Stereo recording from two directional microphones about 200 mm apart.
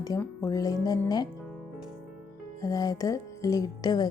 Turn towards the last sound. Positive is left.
turn(degrees=20)  # may be behind; listen again after turning